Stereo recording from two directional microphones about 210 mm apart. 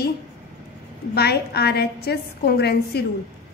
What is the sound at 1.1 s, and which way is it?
A woman's voice, 50° left (ahead or behind).